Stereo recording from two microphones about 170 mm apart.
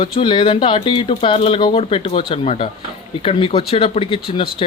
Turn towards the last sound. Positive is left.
turn(degrees=30)  # may be behind; listen again after turning